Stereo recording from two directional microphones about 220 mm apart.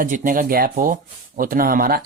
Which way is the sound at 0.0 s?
35° right (ahead or behind).